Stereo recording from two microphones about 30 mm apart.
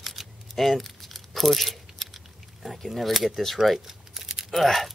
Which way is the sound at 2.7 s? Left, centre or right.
Centre.